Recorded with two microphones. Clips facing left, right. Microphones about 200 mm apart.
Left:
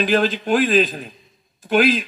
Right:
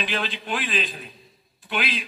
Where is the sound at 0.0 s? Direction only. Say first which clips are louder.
Left 11 dB; 45° left (ahead or behind).